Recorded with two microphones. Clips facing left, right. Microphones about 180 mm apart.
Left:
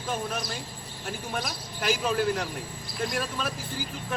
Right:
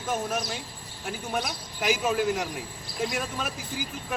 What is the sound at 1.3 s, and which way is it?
Speech, 10° right (ahead or behind).